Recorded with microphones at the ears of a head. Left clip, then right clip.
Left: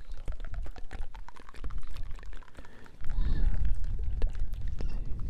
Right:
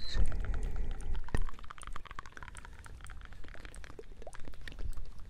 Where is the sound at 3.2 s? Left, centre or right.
Left.